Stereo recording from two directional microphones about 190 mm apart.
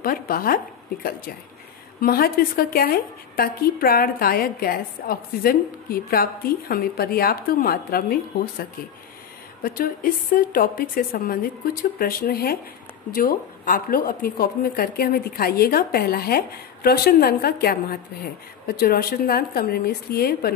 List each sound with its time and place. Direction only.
0.0 s a woman's voice: 50° left (ahead or behind)
2.0 s a woman's voice: 50° left (ahead or behind)